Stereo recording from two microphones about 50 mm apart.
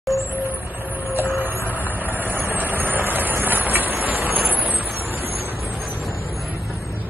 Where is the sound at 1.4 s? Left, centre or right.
Right.